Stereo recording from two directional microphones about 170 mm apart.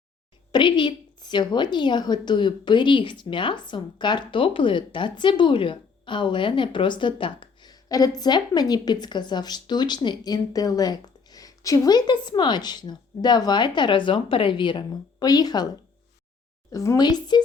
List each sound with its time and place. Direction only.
0.5 s a woman's voice: 30° left (ahead or behind)
16.7 s a woman's voice: 20° left (ahead or behind)